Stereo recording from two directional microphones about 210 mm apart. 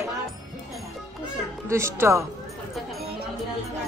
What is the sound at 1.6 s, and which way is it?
Speech, 15° right (ahead or behind).